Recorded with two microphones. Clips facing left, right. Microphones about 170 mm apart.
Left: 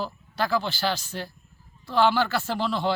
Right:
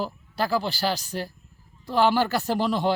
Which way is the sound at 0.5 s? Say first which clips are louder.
Right 1 dB; 35° right (ahead or behind).